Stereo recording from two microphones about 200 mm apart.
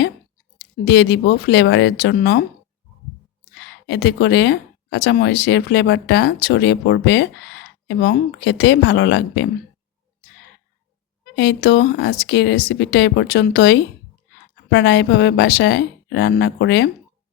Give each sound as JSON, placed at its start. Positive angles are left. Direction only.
{"t": 0.9, "sound": "speech", "side_deg": 60}
{"t": 3.8, "sound": "speech", "side_deg": 60}
{"t": 11.3, "sound": "speech", "side_deg": 55}